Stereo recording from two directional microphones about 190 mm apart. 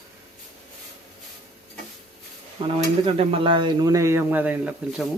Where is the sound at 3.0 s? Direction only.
30° right (ahead or behind).